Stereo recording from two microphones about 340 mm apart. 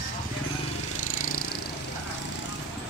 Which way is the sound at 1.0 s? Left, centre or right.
Left.